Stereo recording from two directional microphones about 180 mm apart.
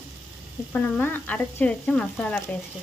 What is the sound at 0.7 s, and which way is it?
Speech, 10° left (ahead or behind).